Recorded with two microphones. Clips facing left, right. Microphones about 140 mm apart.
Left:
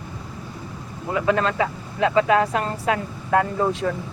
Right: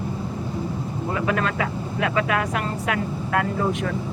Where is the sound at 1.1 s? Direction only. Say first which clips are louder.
Left 4 dB; 25° left (ahead or behind).